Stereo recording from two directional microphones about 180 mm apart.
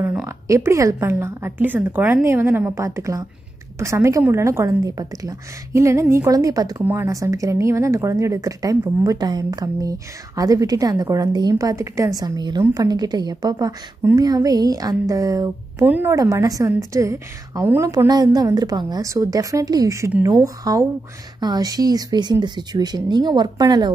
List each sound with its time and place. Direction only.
0.0 s a woman's voice: 10° right (ahead or behind)